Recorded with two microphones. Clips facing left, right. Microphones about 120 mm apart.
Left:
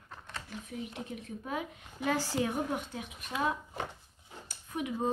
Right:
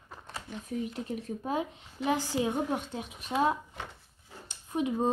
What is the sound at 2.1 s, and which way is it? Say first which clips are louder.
A woman's voice: right 2 dB; 15° right (ahead or behind).